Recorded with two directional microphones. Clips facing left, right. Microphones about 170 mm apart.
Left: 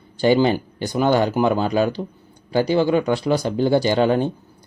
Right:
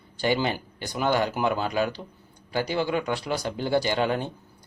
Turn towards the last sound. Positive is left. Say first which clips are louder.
# left 7 dB
turn(degrees=30)  # may be behind; listen again after turning